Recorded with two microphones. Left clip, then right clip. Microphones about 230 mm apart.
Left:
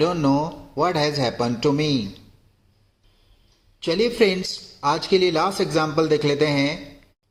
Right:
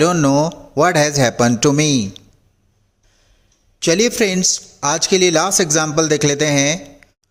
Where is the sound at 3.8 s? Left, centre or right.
Right.